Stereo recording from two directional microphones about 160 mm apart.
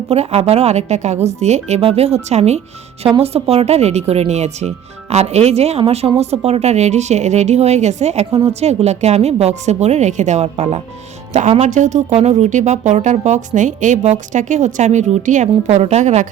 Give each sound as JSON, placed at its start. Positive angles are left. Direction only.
{"t": 0.1, "sound": "speech", "side_deg": -40}
{"t": 8.3, "sound": "a woman's voice", "side_deg": -20}
{"t": 8.6, "sound": "speech", "side_deg": -45}